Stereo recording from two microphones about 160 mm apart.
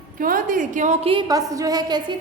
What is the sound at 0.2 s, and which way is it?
Speech, 60° right (ahead or behind).